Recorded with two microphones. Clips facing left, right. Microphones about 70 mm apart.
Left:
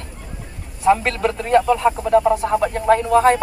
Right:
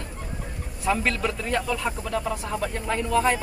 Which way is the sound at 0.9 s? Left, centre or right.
Left.